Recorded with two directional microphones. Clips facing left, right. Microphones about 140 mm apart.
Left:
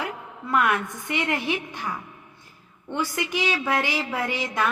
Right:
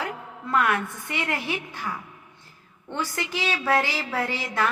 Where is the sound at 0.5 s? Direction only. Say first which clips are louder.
Left 1 dB; 20° left (ahead or behind).